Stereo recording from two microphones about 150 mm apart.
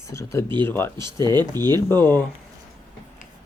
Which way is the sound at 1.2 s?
25° right (ahead or behind).